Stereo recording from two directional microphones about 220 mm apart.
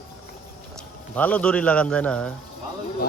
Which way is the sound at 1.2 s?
5° left (ahead or behind).